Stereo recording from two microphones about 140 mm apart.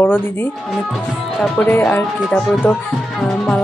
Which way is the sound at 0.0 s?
15° left (ahead or behind).